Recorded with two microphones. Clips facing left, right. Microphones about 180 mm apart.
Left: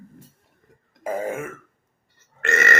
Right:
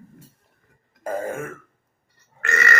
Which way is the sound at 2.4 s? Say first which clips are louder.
Left 2 dB; 25° left (ahead or behind).